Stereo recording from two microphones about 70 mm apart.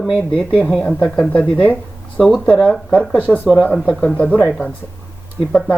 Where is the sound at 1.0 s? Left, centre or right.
Centre.